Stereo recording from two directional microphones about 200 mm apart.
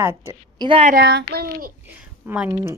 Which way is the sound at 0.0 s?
10° right (ahead or behind).